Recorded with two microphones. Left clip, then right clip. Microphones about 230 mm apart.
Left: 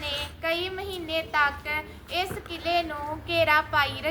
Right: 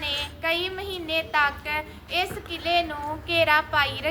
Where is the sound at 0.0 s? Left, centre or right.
Centre.